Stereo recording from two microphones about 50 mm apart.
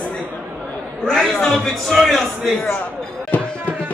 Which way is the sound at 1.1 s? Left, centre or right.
Centre.